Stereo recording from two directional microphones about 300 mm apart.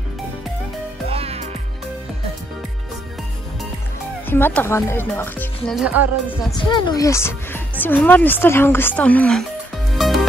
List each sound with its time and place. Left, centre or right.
1.1 s music: centre
4.3 s speech: centre
5.7 s speech: centre
6.2 s speech: centre
9.9 s music: centre